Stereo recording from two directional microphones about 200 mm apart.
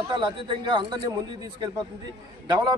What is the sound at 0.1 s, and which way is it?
A man's voice, 25° right (ahead or behind).